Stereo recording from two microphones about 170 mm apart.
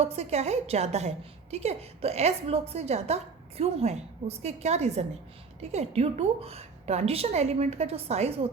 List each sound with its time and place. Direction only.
0.0 s a woman's voice: 35° right (ahead or behind)